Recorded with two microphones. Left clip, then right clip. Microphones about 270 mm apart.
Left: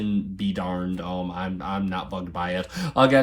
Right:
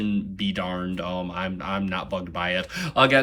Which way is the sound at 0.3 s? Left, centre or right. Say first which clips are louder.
Right 1 dB; centre.